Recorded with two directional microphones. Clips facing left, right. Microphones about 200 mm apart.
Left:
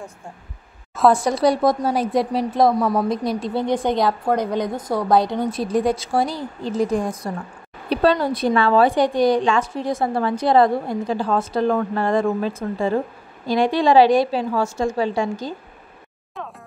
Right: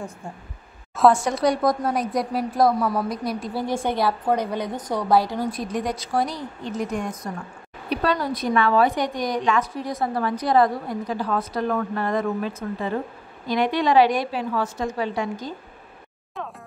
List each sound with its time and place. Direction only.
1.1 s a woman's voice: 35° left (ahead or behind); by 4.0 s 20° left (ahead or behind)
4.3 s a woman's voice: 10° right (ahead or behind)
4.6 s a woman's voice: 10° left (ahead or behind)
5.4 s a woman's voice: 30° left (ahead or behind)